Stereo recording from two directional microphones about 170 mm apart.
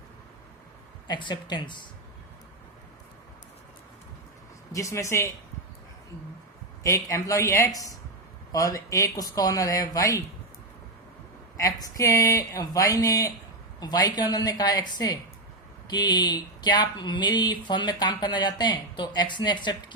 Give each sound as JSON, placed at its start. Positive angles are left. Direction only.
{"t": 1.0, "sound": "speech", "side_deg": 25}
{"t": 4.7, "sound": "speech", "side_deg": 20}
{"t": 6.8, "sound": "speech", "side_deg": 20}
{"t": 11.5, "sound": "speech", "side_deg": 20}